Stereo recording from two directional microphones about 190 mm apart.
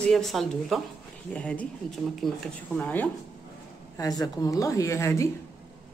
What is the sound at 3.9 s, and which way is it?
Speech, 20° left (ahead or behind).